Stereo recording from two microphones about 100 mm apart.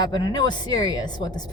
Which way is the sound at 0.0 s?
45° left (ahead or behind).